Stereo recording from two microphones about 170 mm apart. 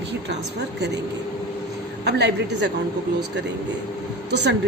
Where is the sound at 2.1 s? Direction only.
85° right.